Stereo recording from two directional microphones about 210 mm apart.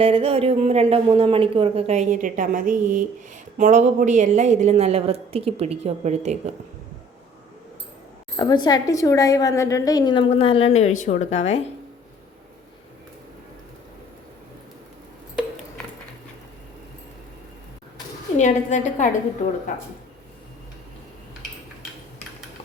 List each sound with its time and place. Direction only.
0.0 s a woman's voice: 25° right (ahead or behind)
8.4 s a woman's voice: 20° left (ahead or behind)
18.3 s a woman's voice: 35° left (ahead or behind)